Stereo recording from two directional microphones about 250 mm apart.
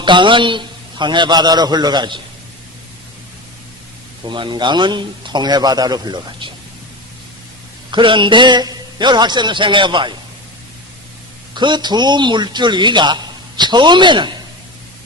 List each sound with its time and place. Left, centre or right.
0.0 s a man's voice: centre
4.3 s a man's voice: centre
7.9 s a man's voice: centre
11.5 s a man's voice: centre